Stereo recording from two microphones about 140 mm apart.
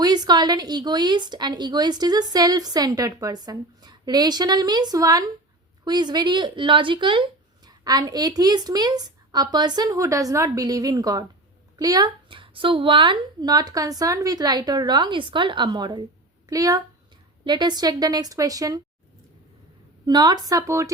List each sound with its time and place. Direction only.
0.0 s speech: 30° right (ahead or behind)
20.1 s speech: 30° right (ahead or behind)